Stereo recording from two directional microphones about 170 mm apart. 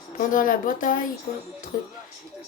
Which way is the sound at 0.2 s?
50° left (ahead or behind).